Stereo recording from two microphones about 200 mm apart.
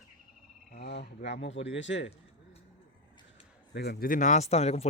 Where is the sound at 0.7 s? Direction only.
55° left (ahead or behind).